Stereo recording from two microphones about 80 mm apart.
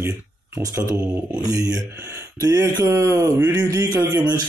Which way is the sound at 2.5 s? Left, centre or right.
Right.